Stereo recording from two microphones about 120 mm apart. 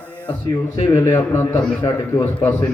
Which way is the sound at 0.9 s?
25° left (ahead or behind).